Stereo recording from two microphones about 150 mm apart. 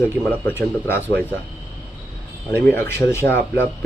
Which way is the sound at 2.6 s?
15° left (ahead or behind).